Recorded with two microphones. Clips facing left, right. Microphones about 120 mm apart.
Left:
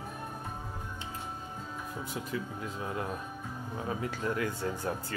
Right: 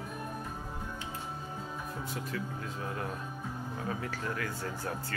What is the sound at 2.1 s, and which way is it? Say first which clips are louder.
Speech: left 2 dB; 20° left (ahead or behind).